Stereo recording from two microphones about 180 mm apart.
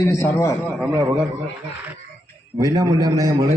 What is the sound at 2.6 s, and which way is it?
Speech, 20° right (ahead or behind).